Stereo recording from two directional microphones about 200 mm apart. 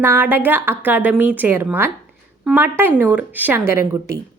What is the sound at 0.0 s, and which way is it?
A woman's voice, 10° right (ahead or behind).